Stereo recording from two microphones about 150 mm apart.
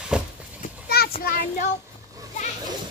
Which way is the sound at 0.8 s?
90° left.